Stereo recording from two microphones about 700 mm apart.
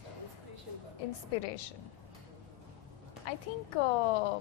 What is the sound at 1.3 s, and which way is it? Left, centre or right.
Speech, left.